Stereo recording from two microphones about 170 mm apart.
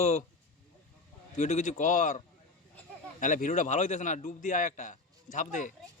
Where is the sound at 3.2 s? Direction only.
50° left (ahead or behind).